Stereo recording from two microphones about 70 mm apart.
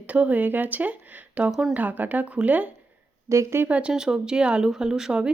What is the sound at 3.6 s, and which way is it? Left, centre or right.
Speech, centre.